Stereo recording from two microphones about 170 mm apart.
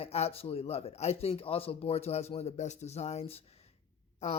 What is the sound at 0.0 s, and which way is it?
Speech, 35° left (ahead or behind).